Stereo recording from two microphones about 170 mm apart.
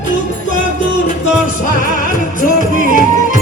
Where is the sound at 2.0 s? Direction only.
50° left (ahead or behind).